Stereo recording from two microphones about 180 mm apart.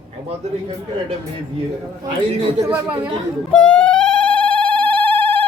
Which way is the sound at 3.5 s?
5° left (ahead or behind).